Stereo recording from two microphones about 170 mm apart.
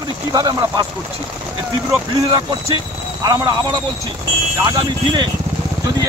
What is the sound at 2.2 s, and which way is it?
Speech, 35° right (ahead or behind).